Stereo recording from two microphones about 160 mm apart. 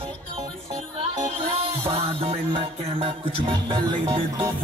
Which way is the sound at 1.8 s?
35° right (ahead or behind).